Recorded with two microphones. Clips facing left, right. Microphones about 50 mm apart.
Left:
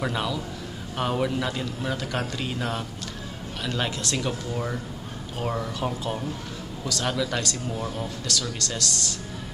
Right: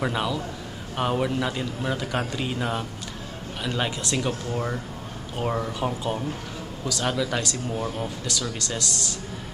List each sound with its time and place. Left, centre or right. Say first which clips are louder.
0.0 s a man's voice: right 2 dB; centre
8.0 s a man's voice: right 1 dB; centre